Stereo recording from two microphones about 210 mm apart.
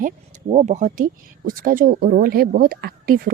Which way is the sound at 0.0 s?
35° right (ahead or behind).